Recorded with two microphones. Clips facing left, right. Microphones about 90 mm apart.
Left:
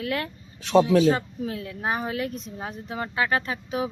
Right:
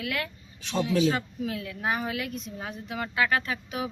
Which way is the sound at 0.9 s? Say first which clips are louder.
Left 5 dB; 35° left (ahead or behind).